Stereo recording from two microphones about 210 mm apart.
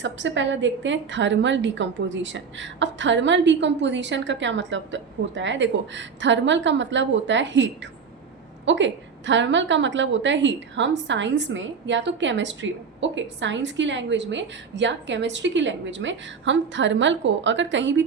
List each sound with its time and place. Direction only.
0.0 s a woman's voice: 60° right (ahead or behind)